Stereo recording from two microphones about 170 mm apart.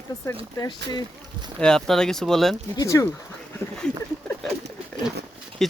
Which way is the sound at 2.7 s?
20° left (ahead or behind).